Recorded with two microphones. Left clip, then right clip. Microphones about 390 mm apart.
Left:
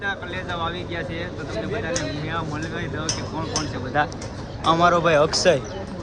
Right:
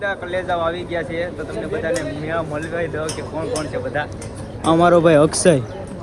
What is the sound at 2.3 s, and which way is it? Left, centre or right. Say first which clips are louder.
Speech: right 5 dB; centre.